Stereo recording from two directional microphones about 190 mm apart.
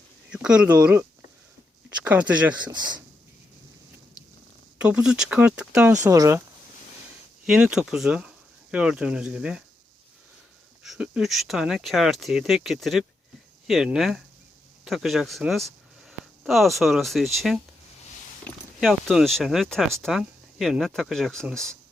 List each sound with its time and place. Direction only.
0.3 s speech: 5° right (ahead or behind)
2.0 s speech: 5° right (ahead or behind)
4.8 s speech: 5° right (ahead or behind)
5.9 s speech: 15° right (ahead or behind)
7.4 s speech: 5° right (ahead or behind)
10.8 s speech: 5° right (ahead or behind)